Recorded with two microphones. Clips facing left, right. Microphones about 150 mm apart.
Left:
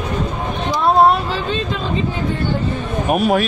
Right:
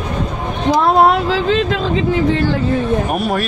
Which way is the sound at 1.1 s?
90° right.